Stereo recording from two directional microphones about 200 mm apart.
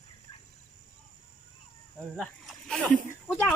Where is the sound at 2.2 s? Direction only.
Centre (ahead or behind).